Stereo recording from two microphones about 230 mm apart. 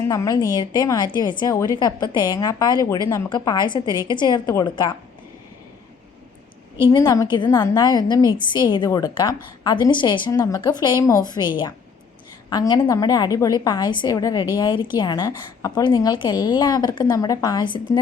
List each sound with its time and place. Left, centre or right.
0.0 s a woman's voice: centre
6.9 s a woman's voice: centre